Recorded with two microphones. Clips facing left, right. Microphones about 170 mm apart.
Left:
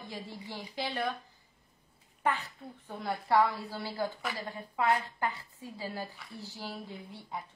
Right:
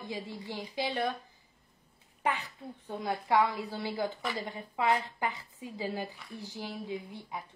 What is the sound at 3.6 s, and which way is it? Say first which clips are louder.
A woman's voice: right 2 dB; 20° right (ahead or behind).